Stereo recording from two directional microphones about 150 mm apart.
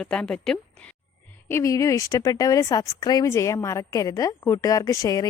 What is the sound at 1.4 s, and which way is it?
Speech, 20° left (ahead or behind).